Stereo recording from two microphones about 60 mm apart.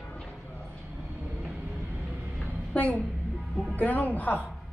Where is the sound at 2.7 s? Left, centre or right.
Left.